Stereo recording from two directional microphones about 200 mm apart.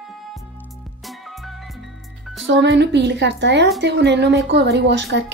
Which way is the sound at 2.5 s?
65° right (ahead or behind).